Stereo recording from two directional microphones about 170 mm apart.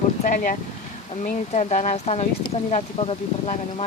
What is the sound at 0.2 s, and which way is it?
Speech, 50° left (ahead or behind).